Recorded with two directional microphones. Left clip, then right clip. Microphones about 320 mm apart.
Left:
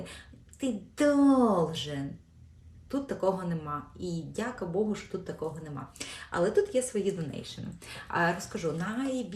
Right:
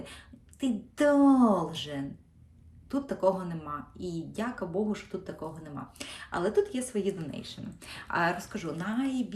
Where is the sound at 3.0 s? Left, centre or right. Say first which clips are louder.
Right 2 dB; centre.